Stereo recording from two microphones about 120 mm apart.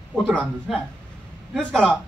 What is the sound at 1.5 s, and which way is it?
Speech, 5° left (ahead or behind).